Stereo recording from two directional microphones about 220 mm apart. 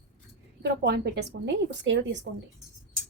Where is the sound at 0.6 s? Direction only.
50° right (ahead or behind).